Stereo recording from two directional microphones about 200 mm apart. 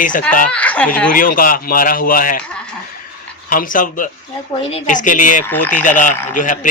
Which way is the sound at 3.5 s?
45° left (ahead or behind).